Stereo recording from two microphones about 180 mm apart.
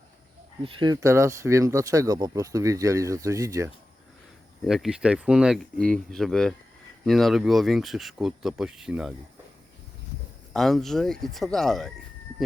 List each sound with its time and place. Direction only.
0.6 s speech: 30° right (ahead or behind)
4.6 s speech: centre (ahead or behind)
10.5 s speech: centre (ahead or behind)